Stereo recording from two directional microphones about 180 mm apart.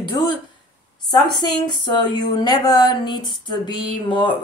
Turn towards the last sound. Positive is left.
turn(degrees=25)  # may be behind; listen again after turning